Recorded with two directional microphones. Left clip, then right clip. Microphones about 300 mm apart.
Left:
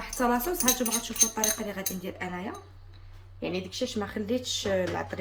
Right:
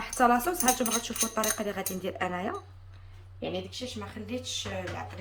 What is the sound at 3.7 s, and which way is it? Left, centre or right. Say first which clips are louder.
Speech: left 6 dB; centre.